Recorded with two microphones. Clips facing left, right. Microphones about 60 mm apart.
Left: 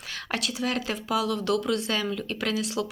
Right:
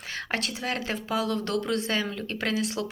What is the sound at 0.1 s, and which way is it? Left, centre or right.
A woman's voice, right.